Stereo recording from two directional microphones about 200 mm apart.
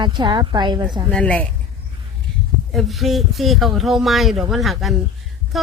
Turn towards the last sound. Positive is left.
turn(degrees=0)  # may be behind; listen again after turning